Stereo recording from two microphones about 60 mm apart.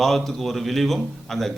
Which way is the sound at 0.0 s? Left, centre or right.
Centre.